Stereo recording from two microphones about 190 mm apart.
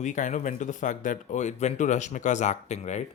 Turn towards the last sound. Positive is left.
turn(degrees=35)  # may be behind; listen again after turning